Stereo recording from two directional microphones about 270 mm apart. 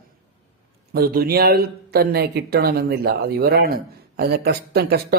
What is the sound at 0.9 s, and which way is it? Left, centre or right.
Speech, right.